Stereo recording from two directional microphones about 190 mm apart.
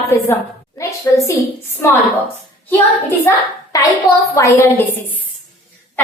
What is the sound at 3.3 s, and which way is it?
A child's voice, 15° left (ahead or behind).